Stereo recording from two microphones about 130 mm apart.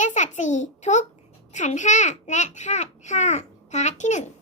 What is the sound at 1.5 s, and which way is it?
A child's voice, 65° left (ahead or behind).